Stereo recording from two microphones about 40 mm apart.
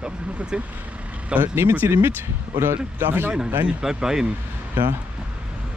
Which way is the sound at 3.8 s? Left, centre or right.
Centre.